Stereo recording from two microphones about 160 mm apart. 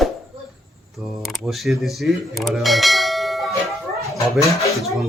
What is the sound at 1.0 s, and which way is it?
Speech, centre (ahead or behind).